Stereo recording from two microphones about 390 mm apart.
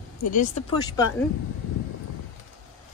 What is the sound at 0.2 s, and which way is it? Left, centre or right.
Speech, centre.